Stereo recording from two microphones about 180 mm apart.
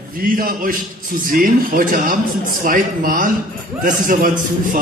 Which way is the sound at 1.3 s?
50° right (ahead or behind).